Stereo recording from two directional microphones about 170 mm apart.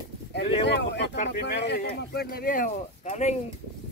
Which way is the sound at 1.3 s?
80° left.